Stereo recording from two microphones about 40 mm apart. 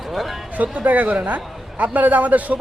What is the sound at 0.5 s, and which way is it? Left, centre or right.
A man's voice, right.